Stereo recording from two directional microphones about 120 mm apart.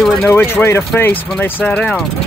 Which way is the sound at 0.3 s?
15° left (ahead or behind).